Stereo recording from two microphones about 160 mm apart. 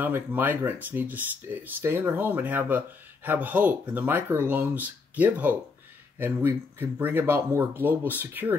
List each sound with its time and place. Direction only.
0.0 s speech: 10° right (ahead or behind)